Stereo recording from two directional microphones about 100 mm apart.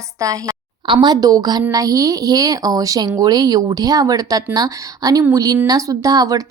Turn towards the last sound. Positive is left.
turn(degrees=-40)  # may be behind; listen again after turning